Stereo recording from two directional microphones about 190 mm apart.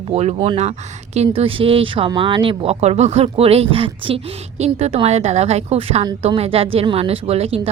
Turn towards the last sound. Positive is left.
turn(degrees=-30)  # may be behind; listen again after turning